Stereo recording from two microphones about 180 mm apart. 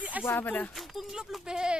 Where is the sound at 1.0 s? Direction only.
Centre (ahead or behind).